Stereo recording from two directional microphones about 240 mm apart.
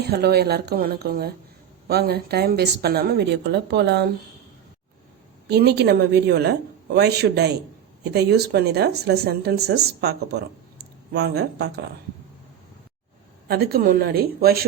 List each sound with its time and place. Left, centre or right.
0.1 s a woman's voice: right
5.5 s speech: right
13.5 s a woman's voice: right